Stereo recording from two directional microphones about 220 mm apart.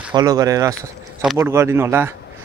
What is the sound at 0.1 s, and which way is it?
Speech, 15° right (ahead or behind).